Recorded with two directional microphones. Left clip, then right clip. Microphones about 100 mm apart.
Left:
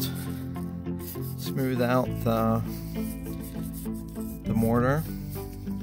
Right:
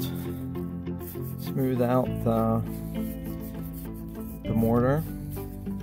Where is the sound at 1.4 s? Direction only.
20° right (ahead or behind).